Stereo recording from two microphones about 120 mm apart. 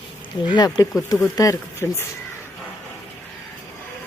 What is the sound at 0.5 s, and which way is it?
Speech, 35° left (ahead or behind).